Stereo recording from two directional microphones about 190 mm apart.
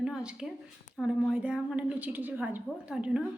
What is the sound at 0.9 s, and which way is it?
A woman's voice, 5° right (ahead or behind).